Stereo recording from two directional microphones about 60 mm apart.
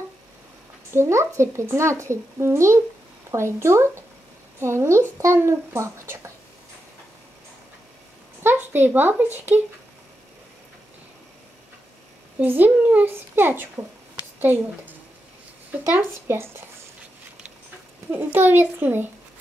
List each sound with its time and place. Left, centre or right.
0.9 s speech: right
8.4 s speech: right
12.4 s a child's voice: right
18.1 s a child's voice: right